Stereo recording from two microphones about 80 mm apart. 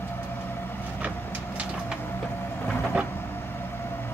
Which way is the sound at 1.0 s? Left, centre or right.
Centre.